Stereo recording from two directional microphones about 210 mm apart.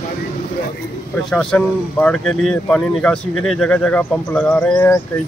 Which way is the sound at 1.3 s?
5° left (ahead or behind).